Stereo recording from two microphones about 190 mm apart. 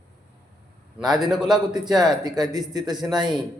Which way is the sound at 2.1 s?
20° right (ahead or behind).